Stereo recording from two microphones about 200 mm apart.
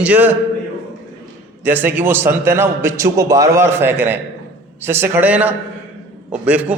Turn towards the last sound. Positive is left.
turn(degrees=-5)  # may be behind; listen again after turning